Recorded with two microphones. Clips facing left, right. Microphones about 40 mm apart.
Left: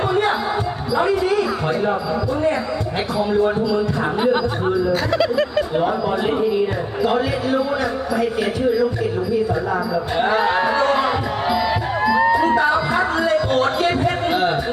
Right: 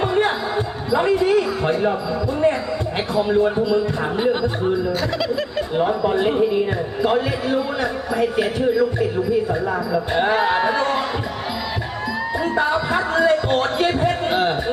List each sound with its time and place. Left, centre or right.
0.9 s speech: right
3.2 s speech: right
4.9 s speech: centre
5.7 s speech: centre
10.2 s speech: centre
13.1 s music: right
13.8 s speech: right